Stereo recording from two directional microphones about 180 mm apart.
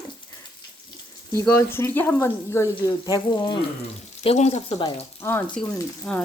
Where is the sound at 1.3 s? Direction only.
15° left (ahead or behind).